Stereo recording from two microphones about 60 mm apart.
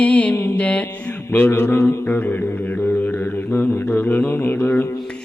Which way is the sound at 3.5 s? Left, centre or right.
Left.